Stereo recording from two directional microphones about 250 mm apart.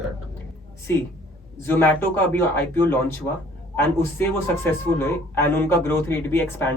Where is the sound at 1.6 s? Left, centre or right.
Centre.